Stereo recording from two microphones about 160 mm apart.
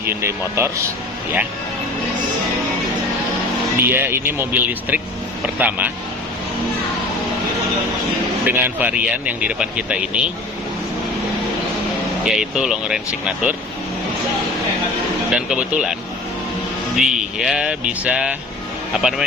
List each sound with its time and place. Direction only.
0.0 s speech: 15° right (ahead or behind)
3.8 s speech: 15° right (ahead or behind)
8.4 s speech: 10° right (ahead or behind)
12.2 s speech: 5° right (ahead or behind)
15.3 s speech: 5° right (ahead or behind)
17.0 s speech: 5° right (ahead or behind)